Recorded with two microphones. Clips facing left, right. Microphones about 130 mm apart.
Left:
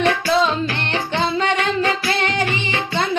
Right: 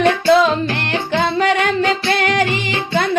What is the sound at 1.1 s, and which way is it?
Music, 60° right (ahead or behind).